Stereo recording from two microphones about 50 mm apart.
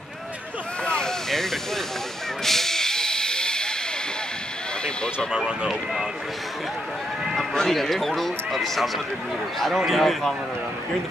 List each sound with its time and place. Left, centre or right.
0.8 s a sound: centre
1.3 s hiss: centre
4.8 s speech: centre
5.3 s speech: centre
7.5 s speech: centre